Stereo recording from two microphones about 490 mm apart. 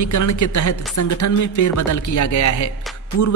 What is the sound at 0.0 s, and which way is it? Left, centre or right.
A woman's voice, left.